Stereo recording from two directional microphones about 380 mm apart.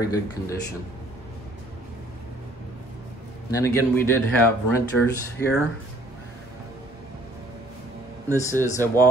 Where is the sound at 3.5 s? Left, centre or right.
Centre.